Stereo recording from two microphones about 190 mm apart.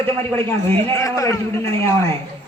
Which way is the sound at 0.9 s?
15° left (ahead or behind).